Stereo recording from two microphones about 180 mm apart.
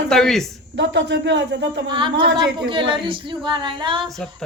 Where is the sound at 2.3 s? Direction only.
75° right (ahead or behind).